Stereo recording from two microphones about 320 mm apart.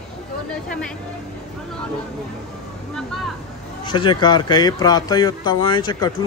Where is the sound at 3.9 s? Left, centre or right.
Centre.